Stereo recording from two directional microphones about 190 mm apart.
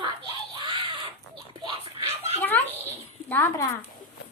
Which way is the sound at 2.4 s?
10° left (ahead or behind).